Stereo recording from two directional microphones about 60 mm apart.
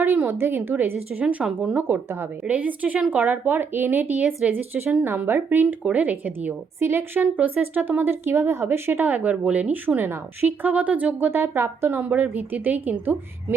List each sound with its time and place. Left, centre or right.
0.0 s a woman's voice: right
2.5 s a woman's voice: right
6.7 s a woman's voice: right
7.2 s speech: right
9.2 s a woman's voice: right